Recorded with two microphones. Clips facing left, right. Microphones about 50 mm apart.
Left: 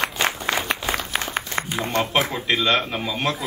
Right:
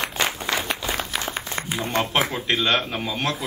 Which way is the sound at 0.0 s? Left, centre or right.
Left.